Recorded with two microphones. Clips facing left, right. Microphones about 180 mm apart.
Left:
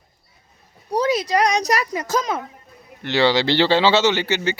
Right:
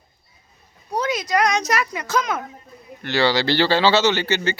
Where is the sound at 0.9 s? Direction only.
35° left (ahead or behind).